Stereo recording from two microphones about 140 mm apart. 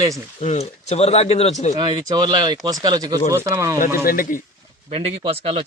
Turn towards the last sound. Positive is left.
turn(degrees=-45)  # may be behind; listen again after turning